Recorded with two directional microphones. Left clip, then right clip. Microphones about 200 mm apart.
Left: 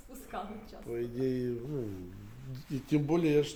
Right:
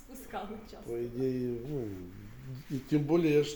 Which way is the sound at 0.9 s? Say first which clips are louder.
Even; 10° left (ahead or behind).